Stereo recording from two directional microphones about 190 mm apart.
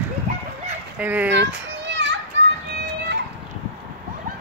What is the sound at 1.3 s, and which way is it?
Children playing, 70° right (ahead or behind).